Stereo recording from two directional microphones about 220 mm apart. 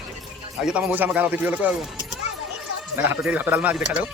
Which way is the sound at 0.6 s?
5° right (ahead or behind).